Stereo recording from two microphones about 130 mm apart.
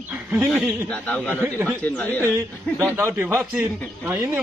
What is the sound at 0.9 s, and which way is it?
Speech, 10° left (ahead or behind).